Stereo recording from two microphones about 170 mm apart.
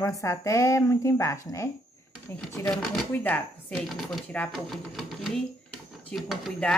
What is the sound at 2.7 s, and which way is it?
Speech, 5° left (ahead or behind).